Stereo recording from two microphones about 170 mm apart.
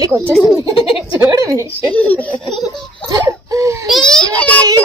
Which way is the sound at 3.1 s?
20° right (ahead or behind).